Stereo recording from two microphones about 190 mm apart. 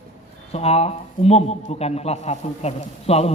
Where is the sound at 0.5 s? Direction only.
35° left (ahead or behind).